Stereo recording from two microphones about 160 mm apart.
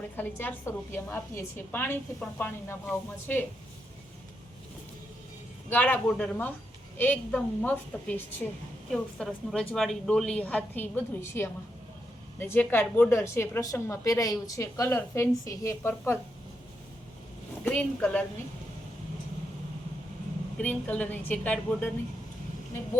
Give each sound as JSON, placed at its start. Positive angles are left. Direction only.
{"t": 0.2, "sound": "a woman's voice", "side_deg": 10}
{"t": 5.6, "sound": "a woman's voice", "side_deg": 10}
{"t": 8.9, "sound": "a woman's voice", "side_deg": 0}
{"t": 17.6, "sound": "a woman's voice", "side_deg": 10}
{"t": 20.6, "sound": "a woman's voice", "side_deg": 10}